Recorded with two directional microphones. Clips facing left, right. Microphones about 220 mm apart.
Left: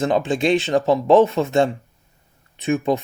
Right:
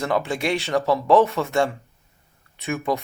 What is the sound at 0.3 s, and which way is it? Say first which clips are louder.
Speech: left 6 dB; 20° left (ahead or behind).